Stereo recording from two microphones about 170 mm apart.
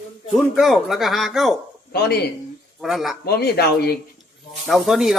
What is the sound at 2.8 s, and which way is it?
Speech, centre (ahead or behind).